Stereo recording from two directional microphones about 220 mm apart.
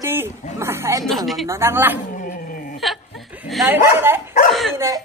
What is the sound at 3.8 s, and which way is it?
Speech, 10° right (ahead or behind).